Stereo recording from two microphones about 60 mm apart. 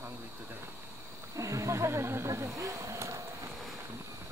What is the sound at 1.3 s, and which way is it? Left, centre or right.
Speech, right.